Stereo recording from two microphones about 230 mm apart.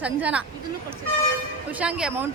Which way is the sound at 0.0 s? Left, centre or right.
Centre.